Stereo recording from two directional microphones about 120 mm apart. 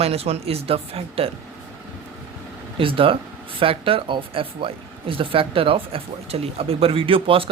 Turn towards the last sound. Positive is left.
turn(degrees=-50)  # may be behind; listen again after turning